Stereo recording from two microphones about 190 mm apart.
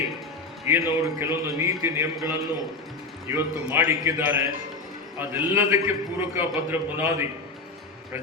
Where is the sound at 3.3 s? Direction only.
10° right (ahead or behind).